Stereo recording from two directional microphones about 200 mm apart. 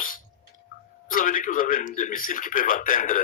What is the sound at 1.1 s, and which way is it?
A man's voice, 45° left (ahead or behind).